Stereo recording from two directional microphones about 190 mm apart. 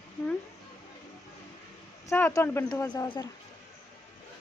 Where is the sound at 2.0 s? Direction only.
15° left (ahead or behind).